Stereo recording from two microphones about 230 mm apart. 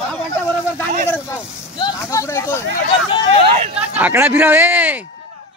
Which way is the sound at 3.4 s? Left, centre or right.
Right.